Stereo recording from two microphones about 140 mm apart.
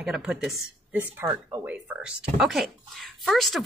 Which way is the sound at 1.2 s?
25° right (ahead or behind).